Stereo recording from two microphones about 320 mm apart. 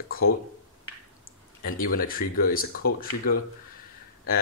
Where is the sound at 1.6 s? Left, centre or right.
Left.